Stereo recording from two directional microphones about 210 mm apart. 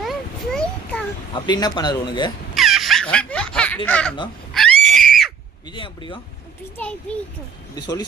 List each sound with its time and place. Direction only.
0.0 s a sound: centre (ahead or behind)
1.3 s speech: 20° left (ahead or behind)
2.6 s a sound: centre (ahead or behind)
3.8 s a child's voice: 5° left (ahead or behind)
4.5 s screaming: centre (ahead or behind)
5.6 s speech: 20° left (ahead or behind)
6.7 s a child's voice: 5° left (ahead or behind)
7.8 s speech: 20° left (ahead or behind)